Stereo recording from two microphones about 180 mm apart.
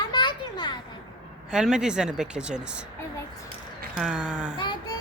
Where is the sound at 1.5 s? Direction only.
5° right (ahead or behind).